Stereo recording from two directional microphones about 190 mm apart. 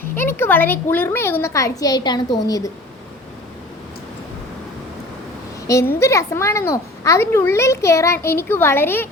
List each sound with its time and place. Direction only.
0.2 s a child's voice: 10° left (ahead or behind)
5.6 s a woman's voice: 15° left (ahead or behind)